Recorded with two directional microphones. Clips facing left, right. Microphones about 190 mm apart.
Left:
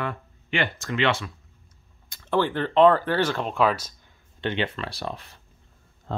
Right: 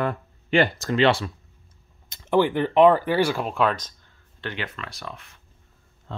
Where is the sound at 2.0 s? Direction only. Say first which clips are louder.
Right 4 dB; 20° right (ahead or behind); by 4.1 s 10° left (ahead or behind).